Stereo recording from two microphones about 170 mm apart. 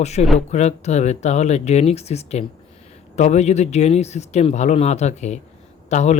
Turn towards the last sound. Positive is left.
turn(degrees=45)  # may be behind; listen again after turning